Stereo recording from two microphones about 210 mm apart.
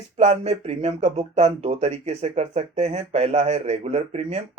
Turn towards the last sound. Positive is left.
turn(degrees=-30)  # may be behind; listen again after turning